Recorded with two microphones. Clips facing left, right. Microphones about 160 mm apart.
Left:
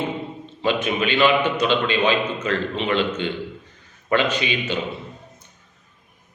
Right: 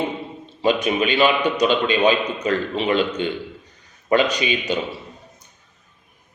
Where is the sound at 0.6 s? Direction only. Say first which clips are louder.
Right 3 dB; 15° right (ahead or behind).